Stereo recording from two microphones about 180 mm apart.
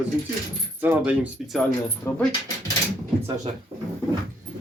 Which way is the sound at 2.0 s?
10° left (ahead or behind).